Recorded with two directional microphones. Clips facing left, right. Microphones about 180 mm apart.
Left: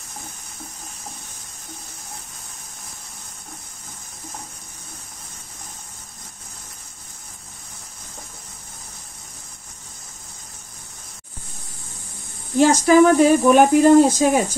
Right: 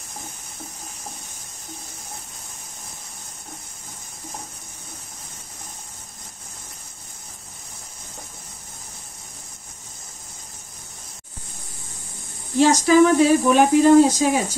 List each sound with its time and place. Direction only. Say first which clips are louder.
12.5 s speech: left 1 dB; 50° left (ahead or behind)